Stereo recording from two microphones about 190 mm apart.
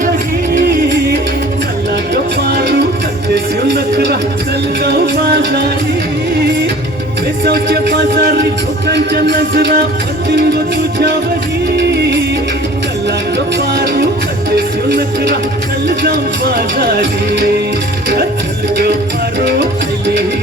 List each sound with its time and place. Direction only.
2.5 s music: 55° right (ahead or behind)
3.8 s a sound: 60° right (ahead or behind)
4.8 s music: 55° right (ahead or behind)
7.4 s music: 55° right (ahead or behind)
13.7 s music: 55° right (ahead or behind)
16.7 s music: 60° right (ahead or behind)